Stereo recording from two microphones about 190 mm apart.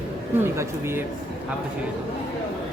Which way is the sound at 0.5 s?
15° right (ahead or behind).